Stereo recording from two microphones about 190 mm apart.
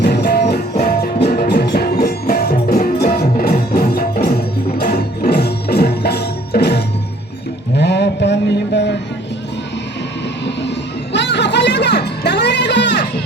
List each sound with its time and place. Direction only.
0.0 s music: 60° left (ahead or behind)
7.8 s a sound: 65° left (ahead or behind)
11.1 s music: 65° left (ahead or behind)